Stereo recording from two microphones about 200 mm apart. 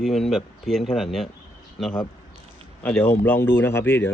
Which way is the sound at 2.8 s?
10° left (ahead or behind).